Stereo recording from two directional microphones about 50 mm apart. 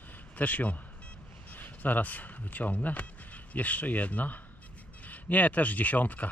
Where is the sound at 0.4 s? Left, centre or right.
Left.